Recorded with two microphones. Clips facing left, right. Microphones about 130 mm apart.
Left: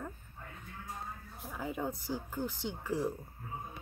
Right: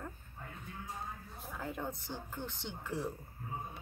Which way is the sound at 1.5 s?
5° left (ahead or behind).